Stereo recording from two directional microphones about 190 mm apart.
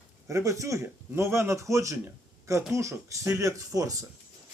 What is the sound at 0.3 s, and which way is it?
Speech, 15° right (ahead or behind).